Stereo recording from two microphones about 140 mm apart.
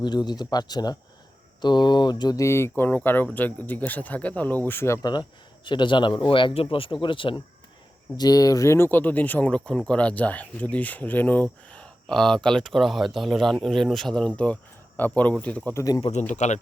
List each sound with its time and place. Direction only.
0.0 s speech: 30° left (ahead or behind); by 4.9 s 15° left (ahead or behind)
5.6 s speech: 35° left (ahead or behind); by 15.8 s 10° left (ahead or behind)
15.8 s speech: 25° left (ahead or behind)
16.0 s speech: 55° left (ahead or behind)